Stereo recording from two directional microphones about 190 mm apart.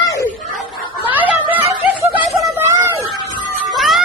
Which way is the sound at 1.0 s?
10° right (ahead or behind).